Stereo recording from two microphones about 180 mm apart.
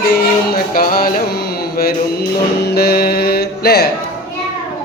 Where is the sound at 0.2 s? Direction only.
55° left (ahead or behind).